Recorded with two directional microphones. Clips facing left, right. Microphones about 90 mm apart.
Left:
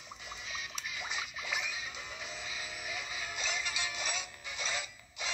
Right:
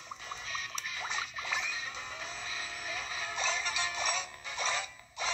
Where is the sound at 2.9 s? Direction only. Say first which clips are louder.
Right 3 dB; 35° right (ahead or behind).